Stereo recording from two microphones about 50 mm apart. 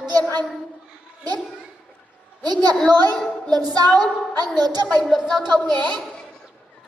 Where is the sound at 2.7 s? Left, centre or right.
Centre.